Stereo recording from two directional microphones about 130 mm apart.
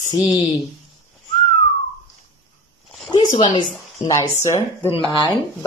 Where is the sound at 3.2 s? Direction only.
75° left (ahead or behind).